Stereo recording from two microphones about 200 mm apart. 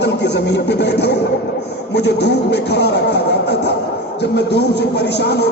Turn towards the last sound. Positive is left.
turn(degrees=55)  # may be behind; listen again after turning